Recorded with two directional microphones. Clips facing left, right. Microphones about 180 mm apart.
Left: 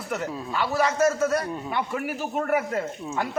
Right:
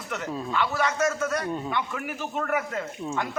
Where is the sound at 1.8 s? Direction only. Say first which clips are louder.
Left 3 dB; 40° left (ahead or behind).